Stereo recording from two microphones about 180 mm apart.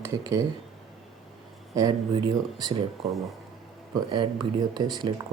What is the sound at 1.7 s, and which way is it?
Speech, 20° right (ahead or behind).